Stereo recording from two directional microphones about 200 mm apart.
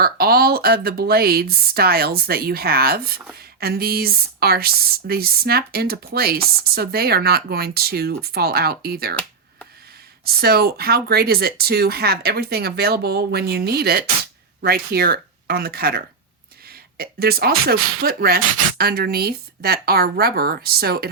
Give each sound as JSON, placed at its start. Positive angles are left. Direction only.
{"t": 0.0, "sound": "speech", "side_deg": -50}
{"t": 10.2, "sound": "speech", "side_deg": -50}